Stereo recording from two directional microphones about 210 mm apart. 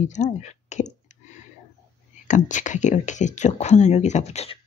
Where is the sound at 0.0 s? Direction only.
35° left (ahead or behind).